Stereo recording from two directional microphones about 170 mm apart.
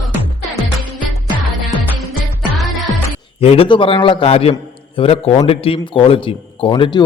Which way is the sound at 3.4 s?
35° left (ahead or behind).